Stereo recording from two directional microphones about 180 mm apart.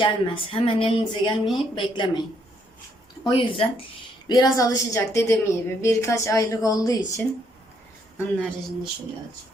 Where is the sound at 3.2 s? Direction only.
30° left (ahead or behind).